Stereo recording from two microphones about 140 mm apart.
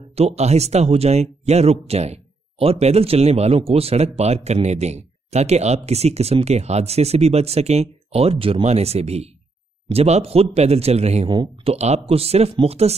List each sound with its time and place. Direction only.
0.1 s speech: 45° right (ahead or behind)